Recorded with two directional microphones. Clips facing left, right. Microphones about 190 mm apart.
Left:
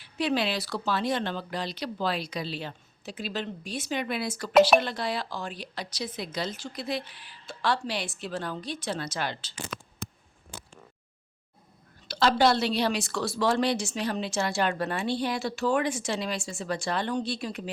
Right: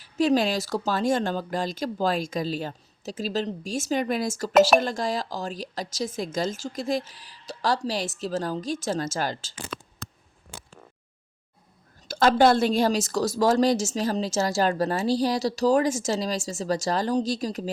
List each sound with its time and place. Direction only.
0.0 s speech: 45° right (ahead or behind)
12.0 s a woman's voice: 50° right (ahead or behind)